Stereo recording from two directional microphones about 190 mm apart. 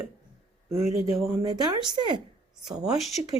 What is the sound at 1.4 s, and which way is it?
Speech, 20° right (ahead or behind).